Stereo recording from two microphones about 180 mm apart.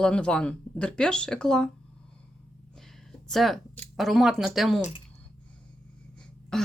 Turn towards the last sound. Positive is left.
turn(degrees=5)  # may be behind; listen again after turning